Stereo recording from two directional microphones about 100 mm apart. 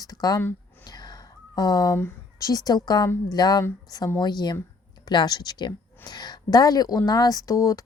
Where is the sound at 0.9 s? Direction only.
40° left (ahead or behind).